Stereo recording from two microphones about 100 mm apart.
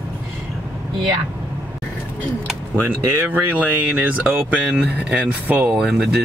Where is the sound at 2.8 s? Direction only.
20° right (ahead or behind).